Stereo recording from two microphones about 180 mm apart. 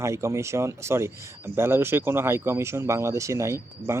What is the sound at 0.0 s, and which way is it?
Speech, 15° right (ahead or behind).